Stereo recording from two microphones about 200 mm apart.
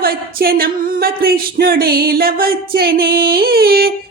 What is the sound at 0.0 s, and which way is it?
Speech, 50° right (ahead or behind).